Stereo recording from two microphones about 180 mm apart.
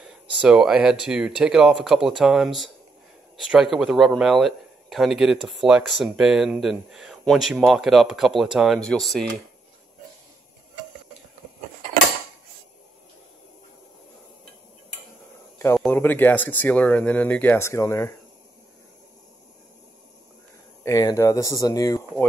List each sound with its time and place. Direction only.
0.0 s speech: 5° right (ahead or behind)
15.6 s speech: 10° left (ahead or behind)
20.8 s speech: 20° left (ahead or behind)